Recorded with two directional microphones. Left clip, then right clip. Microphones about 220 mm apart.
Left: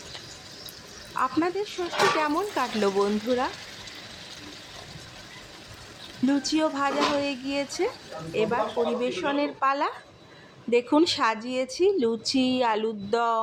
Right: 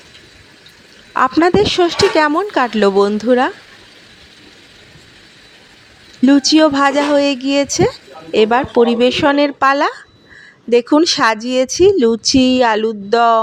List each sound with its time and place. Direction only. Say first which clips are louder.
1.1 s speech: right 14 dB; 40° right (ahead or behind)
6.2 s speech: right 14 dB; 35° right (ahead or behind)